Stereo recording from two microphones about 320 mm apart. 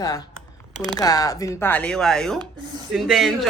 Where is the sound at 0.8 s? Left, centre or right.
Centre.